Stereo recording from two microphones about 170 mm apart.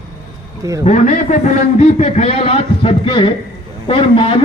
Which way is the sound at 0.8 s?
45° left (ahead or behind).